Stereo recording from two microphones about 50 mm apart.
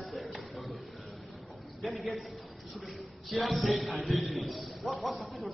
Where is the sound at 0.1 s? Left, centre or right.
Centre.